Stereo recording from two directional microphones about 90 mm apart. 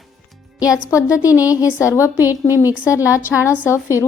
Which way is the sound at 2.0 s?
20° right (ahead or behind).